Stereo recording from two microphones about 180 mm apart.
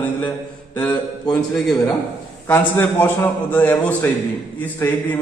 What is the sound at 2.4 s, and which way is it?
A man's voice, 15° left (ahead or behind).